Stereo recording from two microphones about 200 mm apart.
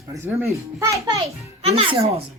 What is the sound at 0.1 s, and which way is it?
A child's voice, 10° right (ahead or behind).